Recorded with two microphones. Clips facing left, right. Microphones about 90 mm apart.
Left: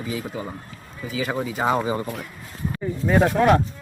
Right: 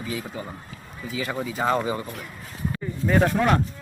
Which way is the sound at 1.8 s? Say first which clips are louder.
Left 3 dB; 20° left (ahead or behind).